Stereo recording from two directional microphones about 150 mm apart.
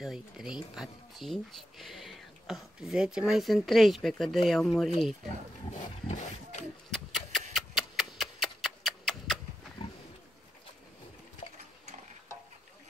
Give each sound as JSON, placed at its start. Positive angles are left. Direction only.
{"t": 0.0, "sound": "speech", "side_deg": 0}
{"t": 5.7, "sound": "speech", "side_deg": 50}
{"t": 6.9, "sound": "a sound", "side_deg": 0}